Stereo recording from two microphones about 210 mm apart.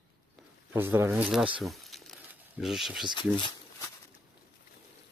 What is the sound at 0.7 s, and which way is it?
Speech, 10° right (ahead or behind).